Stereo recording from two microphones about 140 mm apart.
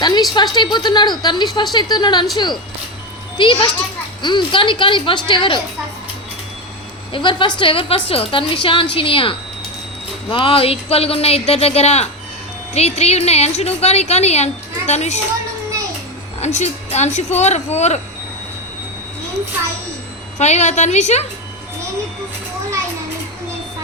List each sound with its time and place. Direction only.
0.0 s a woman's voice: 30° left (ahead or behind)
3.3 s a woman's voice: 35° left (ahead or behind)
7.1 s a woman's voice: 35° left (ahead or behind)
10.3 s speech: 40° left (ahead or behind)
16.4 s speech: 55° left (ahead or behind)
20.4 s a woman's voice: 55° left (ahead or behind)